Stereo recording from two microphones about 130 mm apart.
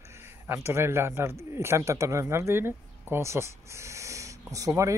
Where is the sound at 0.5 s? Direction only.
20° right (ahead or behind).